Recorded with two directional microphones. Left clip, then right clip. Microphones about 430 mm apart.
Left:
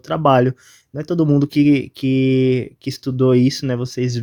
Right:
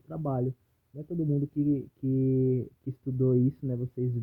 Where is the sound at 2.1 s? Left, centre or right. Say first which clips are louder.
Left 11 dB; centre.